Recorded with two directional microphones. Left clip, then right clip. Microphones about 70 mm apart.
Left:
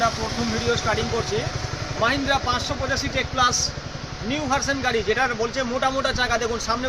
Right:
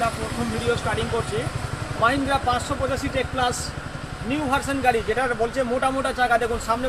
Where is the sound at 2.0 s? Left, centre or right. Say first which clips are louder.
Right 1 dB; left.